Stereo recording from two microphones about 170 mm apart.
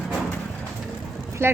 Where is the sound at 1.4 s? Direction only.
15° right (ahead or behind).